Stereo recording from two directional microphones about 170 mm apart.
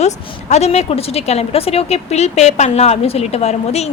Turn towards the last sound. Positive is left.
turn(degrees=40)  # may be behind; listen again after turning